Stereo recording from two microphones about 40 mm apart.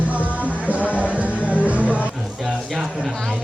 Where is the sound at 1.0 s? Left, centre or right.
Right.